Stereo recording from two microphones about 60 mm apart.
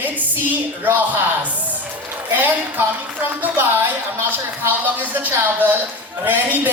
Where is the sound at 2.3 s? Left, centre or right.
Right.